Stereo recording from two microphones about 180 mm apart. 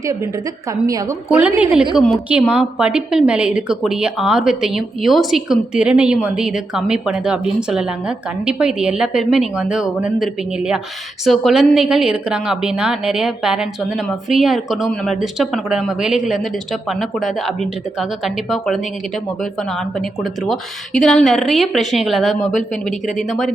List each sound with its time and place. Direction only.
0.9 s a woman's voice: 20° right (ahead or behind)
1.3 s a woman's voice: 5° right (ahead or behind)
20.0 s a woman's voice: centre (ahead or behind)
22.5 s speech: 45° left (ahead or behind)
23.1 s a woman's voice: centre (ahead or behind)